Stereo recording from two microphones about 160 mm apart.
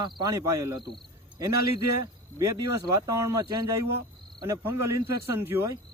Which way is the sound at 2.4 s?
20° right (ahead or behind).